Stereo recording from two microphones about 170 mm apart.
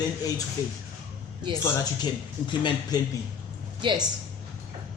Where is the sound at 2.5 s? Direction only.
30° left (ahead or behind).